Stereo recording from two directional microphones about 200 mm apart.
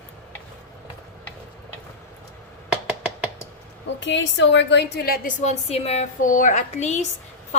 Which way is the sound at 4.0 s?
65° left (ahead or behind).